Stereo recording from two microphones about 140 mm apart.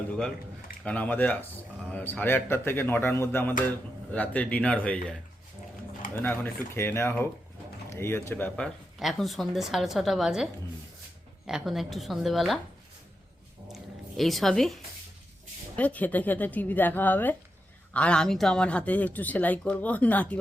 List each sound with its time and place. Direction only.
0.9 s speech: 10° left (ahead or behind)
6.2 s speech: 15° left (ahead or behind); by 12.5 s centre (ahead or behind)
13.7 s a sound: centre (ahead or behind)
15.7 s speech: 10° left (ahead or behind)